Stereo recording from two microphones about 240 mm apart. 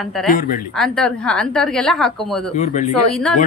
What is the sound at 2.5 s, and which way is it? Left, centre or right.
Speech, left.